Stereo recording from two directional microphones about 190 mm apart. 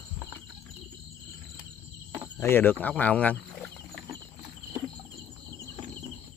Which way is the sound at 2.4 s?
10° left (ahead or behind).